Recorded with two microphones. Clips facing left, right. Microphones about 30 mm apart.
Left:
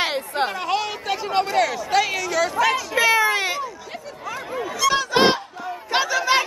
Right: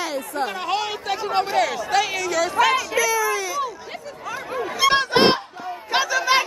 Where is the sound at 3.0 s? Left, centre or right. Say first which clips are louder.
Left 3 dB; left.